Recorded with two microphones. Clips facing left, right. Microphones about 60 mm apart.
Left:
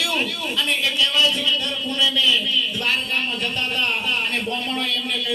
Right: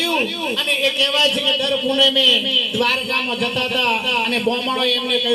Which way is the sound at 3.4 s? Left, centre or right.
Right.